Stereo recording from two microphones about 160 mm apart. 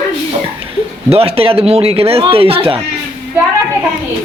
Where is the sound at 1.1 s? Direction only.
40° right (ahead or behind).